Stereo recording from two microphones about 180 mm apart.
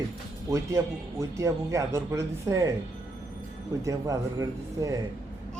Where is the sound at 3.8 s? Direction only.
20° right (ahead or behind).